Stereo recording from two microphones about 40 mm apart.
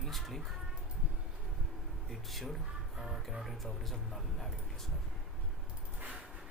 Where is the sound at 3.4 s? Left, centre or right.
Centre.